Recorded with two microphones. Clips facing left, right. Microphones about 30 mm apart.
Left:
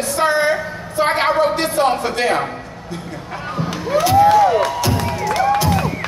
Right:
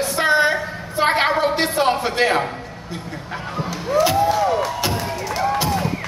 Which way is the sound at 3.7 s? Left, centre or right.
Left.